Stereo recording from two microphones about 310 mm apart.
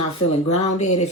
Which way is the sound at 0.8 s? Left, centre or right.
Left.